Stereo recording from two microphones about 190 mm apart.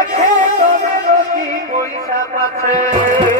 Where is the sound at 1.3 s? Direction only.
45° right (ahead or behind).